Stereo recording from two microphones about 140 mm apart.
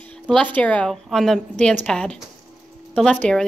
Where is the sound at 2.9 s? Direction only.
5° left (ahead or behind).